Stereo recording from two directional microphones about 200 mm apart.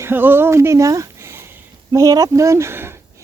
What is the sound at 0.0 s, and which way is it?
Speech, 10° right (ahead or behind).